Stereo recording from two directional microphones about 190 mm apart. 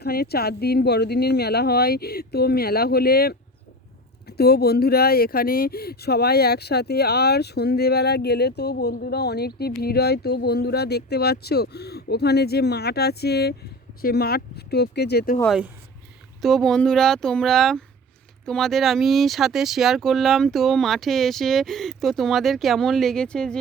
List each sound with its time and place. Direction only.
0.0 s speech: 55° left (ahead or behind)
16.4 s speech: centre (ahead or behind)